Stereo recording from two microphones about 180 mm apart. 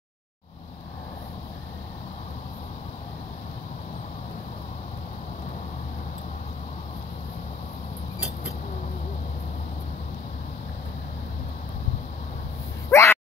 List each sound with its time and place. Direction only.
12.9 s dog: 15° left (ahead or behind)